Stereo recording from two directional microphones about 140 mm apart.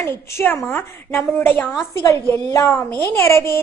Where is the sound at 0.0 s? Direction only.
15° left (ahead or behind).